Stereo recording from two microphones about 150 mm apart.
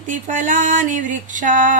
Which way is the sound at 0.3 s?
55° right (ahead or behind).